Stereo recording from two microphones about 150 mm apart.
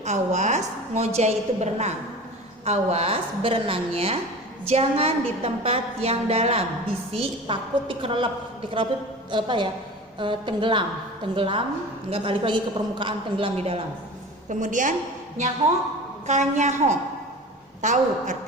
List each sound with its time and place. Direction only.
0.0 s a woman's voice: 50° right (ahead or behind)
14.5 s a woman's voice: 60° right (ahead or behind)
16.2 s a woman's voice: 50° right (ahead or behind)